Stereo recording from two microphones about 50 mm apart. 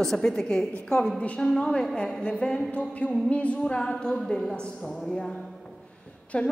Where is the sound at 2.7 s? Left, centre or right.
Left.